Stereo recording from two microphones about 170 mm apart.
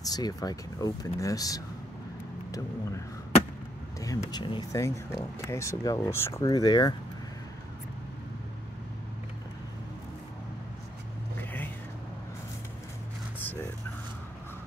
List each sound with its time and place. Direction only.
0.0 s speech: 20° left (ahead or behind)
4.0 s speech: 20° left (ahead or behind)
11.3 s whispering: 10° left (ahead or behind)
13.4 s a sound: 10° left (ahead or behind)